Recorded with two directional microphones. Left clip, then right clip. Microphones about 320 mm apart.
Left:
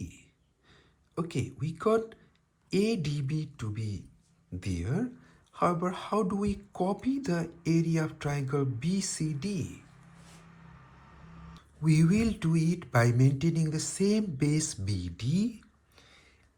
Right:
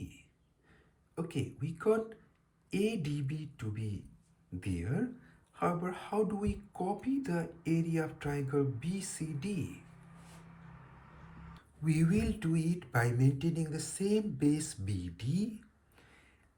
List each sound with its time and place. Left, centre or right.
0.7 s speech: centre
11.5 s speech: centre